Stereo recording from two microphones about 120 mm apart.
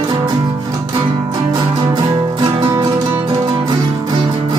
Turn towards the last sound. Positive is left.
turn(degrees=-40)  # may be behind; listen again after turning